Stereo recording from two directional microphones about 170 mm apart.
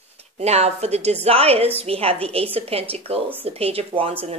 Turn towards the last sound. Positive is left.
turn(degrees=-35)  # may be behind; listen again after turning